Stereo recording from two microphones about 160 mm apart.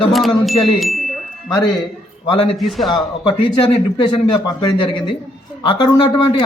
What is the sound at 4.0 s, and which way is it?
Speech, 30° left (ahead or behind).